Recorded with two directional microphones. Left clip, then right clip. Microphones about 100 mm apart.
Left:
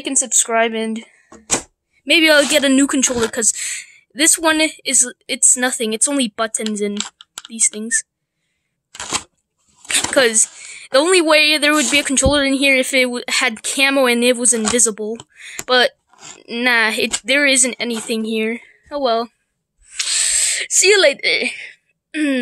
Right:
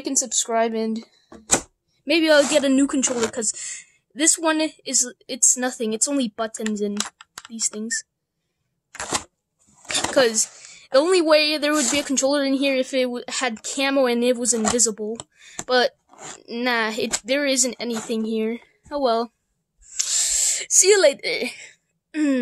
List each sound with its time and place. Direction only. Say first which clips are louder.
0.0 s speech: left 5 dB; centre (ahead or behind)
8.9 s a sound: left 3 dB; 15° right (ahead or behind)
9.8 s a woman's voice: left 4 dB; centre (ahead or behind)
18.9 s a woman's voice: left 3 dB; 20° right (ahead or behind)
20.4 s a woman's voice: left 3 dB; 10° right (ahead or behind)